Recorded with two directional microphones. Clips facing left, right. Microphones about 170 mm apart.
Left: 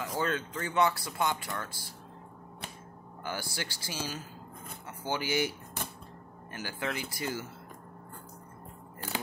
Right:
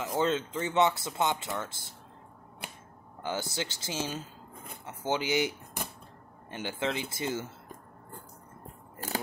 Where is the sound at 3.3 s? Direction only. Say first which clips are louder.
Right 4 dB; 20° right (ahead or behind).